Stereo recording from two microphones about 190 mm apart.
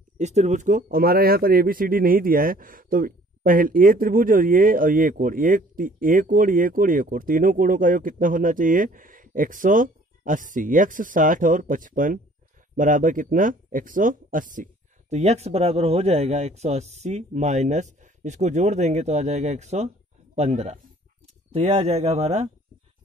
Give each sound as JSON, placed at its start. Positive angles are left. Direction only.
{"t": 0.2, "sound": "speech", "side_deg": -35}